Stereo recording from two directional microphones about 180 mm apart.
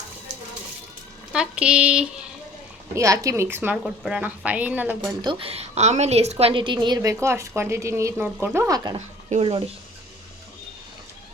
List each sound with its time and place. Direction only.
1.3 s speech: 5° right (ahead or behind)
2.9 s a woman's voice: 15° right (ahead or behind)
4.9 s a woman's voice: 25° right (ahead or behind)
9.0 s speech: 35° right (ahead or behind)